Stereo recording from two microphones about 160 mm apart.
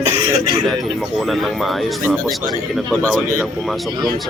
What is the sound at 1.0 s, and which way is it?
Speech, centre (ahead or behind).